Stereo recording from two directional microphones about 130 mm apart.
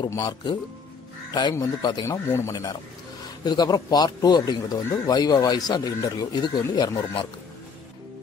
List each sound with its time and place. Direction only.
0.0 s a man's voice: 25° left (ahead or behind)
2.0 s a man's voice: 20° left (ahead or behind)